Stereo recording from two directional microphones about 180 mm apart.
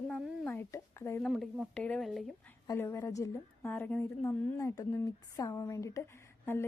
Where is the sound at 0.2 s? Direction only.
5° right (ahead or behind).